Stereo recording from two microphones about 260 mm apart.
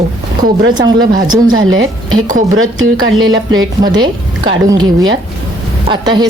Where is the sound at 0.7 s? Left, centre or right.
Centre.